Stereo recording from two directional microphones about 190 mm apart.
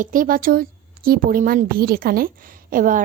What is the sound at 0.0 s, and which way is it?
Speech, 45° right (ahead or behind).